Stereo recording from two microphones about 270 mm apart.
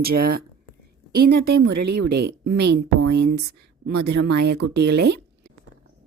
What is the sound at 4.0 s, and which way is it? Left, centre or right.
Speech, right.